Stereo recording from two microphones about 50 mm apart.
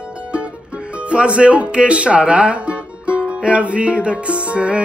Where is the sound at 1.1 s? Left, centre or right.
Right.